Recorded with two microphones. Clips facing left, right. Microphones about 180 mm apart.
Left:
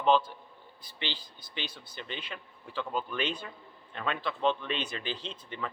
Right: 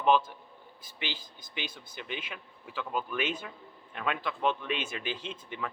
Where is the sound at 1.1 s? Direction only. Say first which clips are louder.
Even; 45° right (ahead or behind).